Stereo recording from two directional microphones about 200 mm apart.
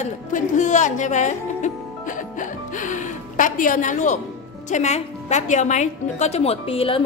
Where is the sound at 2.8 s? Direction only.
40° left (ahead or behind).